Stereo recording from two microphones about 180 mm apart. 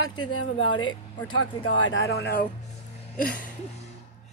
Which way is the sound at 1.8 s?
70° left (ahead or behind).